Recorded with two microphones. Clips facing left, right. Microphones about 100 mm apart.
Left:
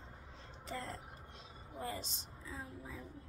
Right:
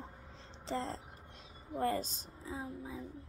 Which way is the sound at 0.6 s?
25° right (ahead or behind).